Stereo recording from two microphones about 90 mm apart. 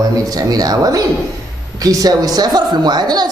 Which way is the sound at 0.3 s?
45° right (ahead or behind).